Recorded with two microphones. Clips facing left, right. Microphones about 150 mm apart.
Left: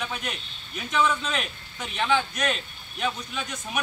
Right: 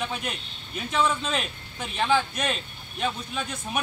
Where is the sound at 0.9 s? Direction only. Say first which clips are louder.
Even; 30° right (ahead or behind).